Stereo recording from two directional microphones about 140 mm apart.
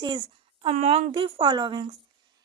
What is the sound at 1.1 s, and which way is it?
Speech, 35° right (ahead or behind).